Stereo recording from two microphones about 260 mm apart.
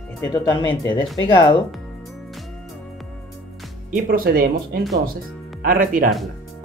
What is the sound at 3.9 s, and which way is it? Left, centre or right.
Speech, right.